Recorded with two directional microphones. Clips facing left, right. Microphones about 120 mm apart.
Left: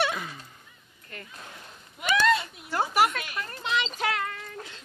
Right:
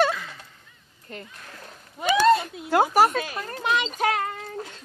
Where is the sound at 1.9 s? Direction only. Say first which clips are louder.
Right 5 dB; 35° right (ahead or behind).